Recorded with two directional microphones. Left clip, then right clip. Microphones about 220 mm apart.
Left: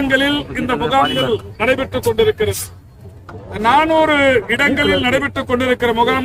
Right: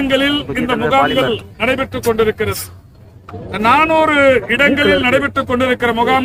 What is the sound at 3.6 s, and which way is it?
A man's voice, 5° left (ahead or behind).